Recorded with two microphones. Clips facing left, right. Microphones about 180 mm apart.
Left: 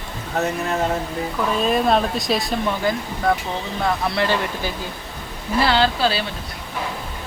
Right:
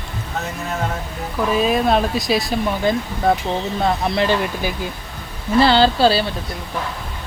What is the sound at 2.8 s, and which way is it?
Speech, 20° right (ahead or behind).